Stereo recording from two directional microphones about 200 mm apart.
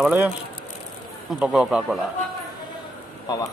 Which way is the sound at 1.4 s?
5° right (ahead or behind).